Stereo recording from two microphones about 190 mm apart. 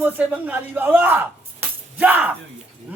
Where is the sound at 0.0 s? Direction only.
10° right (ahead or behind).